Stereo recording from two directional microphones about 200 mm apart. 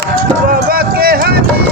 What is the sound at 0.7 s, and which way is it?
Run, 50° right (ahead or behind).